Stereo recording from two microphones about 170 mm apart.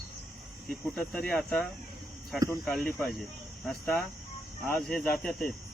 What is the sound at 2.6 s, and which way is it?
Speech, centre (ahead or behind).